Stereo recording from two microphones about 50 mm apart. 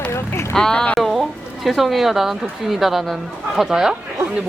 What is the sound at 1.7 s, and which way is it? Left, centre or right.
Speech, centre.